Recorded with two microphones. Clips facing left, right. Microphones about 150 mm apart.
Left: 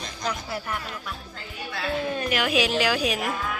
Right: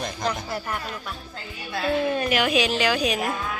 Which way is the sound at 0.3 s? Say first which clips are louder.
Even; 5° left (ahead or behind).